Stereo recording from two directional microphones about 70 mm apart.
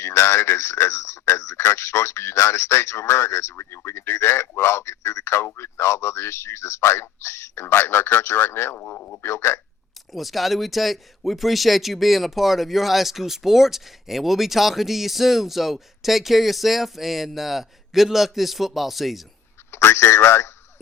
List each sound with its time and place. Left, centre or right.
0.0 s speech: left
10.1 s speech: centre
19.7 s speech: left